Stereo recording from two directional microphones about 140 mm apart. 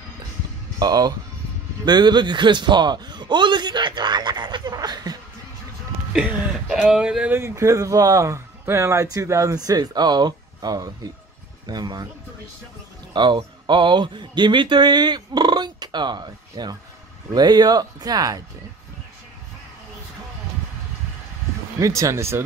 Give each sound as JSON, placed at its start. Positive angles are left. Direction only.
{"t": 0.7, "sound": "a man's voice", "side_deg": -30}
{"t": 6.1, "sound": "speech", "side_deg": -5}
{"t": 13.1, "sound": "speech", "side_deg": -35}
{"t": 21.7, "sound": "speech", "side_deg": -20}